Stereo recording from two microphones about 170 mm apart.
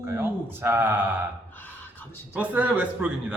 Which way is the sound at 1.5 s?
10° left (ahead or behind).